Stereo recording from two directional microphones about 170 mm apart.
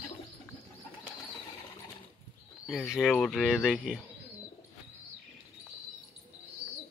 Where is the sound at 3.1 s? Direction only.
5° left (ahead or behind).